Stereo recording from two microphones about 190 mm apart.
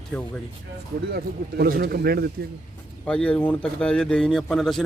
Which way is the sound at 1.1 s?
55° right (ahead or behind).